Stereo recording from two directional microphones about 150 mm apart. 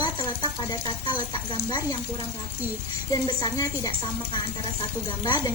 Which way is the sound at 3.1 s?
25° left (ahead or behind).